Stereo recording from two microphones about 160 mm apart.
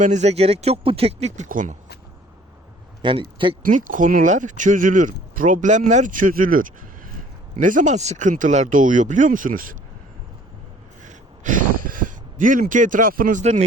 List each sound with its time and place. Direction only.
0.0 s speech: 45° right (ahead or behind)
1.5 s speech: 55° right (ahead or behind)
3.0 s a man's voice: 30° right (ahead or behind)
3.6 s speech: 55° right (ahead or behind)
11.0 s a sound: 55° right (ahead or behind)
13.4 s speech: 45° right (ahead or behind)